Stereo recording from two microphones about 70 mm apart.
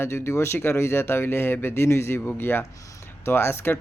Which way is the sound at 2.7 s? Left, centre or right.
Left.